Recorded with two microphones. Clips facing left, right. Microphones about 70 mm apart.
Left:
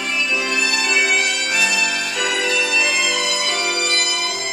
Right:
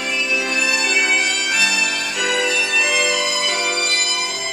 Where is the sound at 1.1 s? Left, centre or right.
Centre.